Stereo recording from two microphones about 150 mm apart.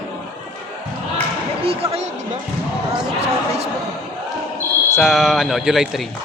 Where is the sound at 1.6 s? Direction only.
40° right (ahead or behind).